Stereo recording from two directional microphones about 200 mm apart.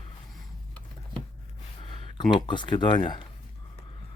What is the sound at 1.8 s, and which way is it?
Speech, 25° left (ahead or behind).